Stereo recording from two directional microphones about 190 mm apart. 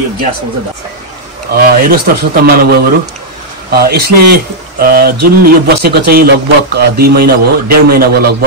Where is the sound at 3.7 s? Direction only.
55° right (ahead or behind).